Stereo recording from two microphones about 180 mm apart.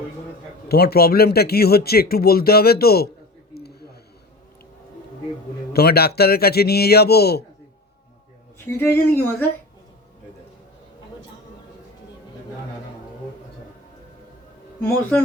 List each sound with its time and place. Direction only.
0.7 s speech: 60° left (ahead or behind)
3.5 s a sound: 60° left (ahead or behind)
5.7 s speech: 60° left (ahead or behind)
8.7 s speech: 10° left (ahead or behind)
14.8 s speech: 10° left (ahead or behind)